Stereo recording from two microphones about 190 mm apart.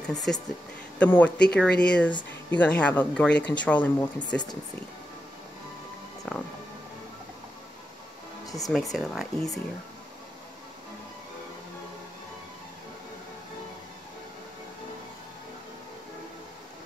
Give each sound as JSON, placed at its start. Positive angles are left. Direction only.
{"t": 0.0, "sound": "speech", "side_deg": 5}
{"t": 6.3, "sound": "speech", "side_deg": 0}
{"t": 8.5, "sound": "speech", "side_deg": 20}
{"t": 8.9, "sound": "speech", "side_deg": 0}